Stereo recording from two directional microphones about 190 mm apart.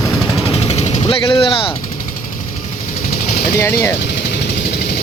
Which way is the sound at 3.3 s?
50° left (ahead or behind).